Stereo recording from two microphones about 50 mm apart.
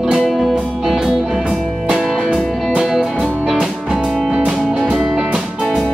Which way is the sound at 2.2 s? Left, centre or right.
Centre.